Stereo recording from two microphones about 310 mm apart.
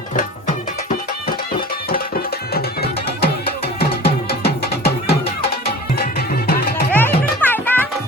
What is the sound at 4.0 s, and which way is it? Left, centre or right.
Music, left.